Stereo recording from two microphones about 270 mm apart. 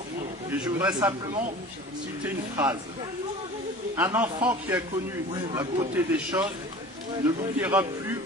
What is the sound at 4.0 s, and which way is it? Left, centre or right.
Speech, centre.